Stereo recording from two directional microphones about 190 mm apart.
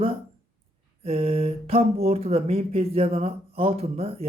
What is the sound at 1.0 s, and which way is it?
Speech, 30° right (ahead or behind).